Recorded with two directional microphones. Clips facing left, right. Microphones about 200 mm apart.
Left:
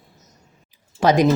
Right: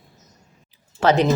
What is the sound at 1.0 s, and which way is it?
Speech, 10° left (ahead or behind).